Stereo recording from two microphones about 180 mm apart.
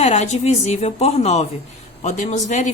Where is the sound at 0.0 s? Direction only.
40° left (ahead or behind).